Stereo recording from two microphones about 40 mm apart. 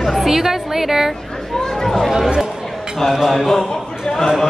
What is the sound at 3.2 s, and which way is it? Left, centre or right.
Speech, centre.